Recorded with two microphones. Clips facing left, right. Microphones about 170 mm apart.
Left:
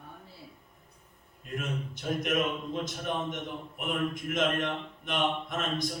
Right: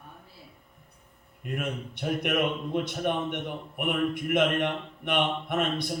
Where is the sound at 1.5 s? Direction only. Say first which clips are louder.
Right 3 dB; 65° right (ahead or behind).